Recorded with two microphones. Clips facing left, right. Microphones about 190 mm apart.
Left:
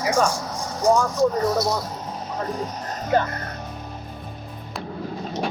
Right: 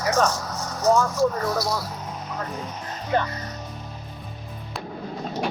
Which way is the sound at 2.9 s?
50° left (ahead or behind).